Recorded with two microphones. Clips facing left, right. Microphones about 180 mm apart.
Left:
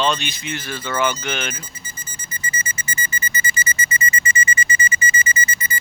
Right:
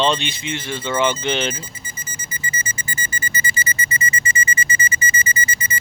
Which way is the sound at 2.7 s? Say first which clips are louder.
Left 1 dB; 40° right (ahead or behind).